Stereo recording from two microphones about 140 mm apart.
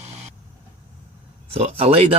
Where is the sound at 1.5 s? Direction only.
45° right (ahead or behind).